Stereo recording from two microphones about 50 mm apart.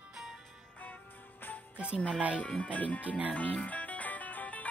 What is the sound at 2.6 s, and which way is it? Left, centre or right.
Music, left.